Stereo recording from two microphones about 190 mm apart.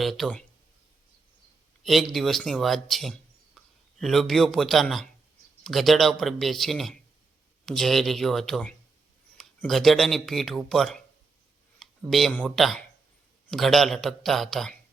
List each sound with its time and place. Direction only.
0.0 s speech: centre (ahead or behind)
1.8 s speech: centre (ahead or behind)